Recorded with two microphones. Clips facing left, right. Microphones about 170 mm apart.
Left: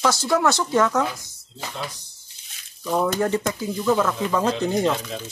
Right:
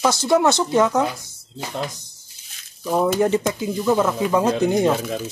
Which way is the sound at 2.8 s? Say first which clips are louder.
Right 3 dB; 10° right (ahead or behind).